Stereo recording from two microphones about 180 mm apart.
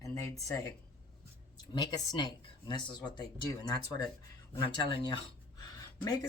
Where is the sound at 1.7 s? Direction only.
25° left (ahead or behind).